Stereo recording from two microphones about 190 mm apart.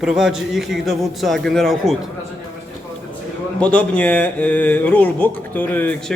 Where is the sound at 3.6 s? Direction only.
5° left (ahead or behind).